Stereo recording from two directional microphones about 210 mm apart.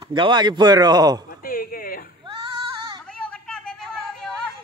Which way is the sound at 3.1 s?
5° left (ahead or behind).